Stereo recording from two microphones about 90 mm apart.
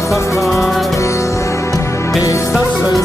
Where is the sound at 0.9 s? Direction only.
35° left (ahead or behind).